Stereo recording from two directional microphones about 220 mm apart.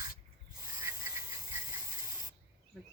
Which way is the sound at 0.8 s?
10° right (ahead or behind).